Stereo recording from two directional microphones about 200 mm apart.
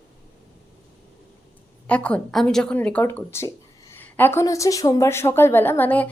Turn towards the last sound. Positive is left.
turn(degrees=10)  # may be behind; listen again after turning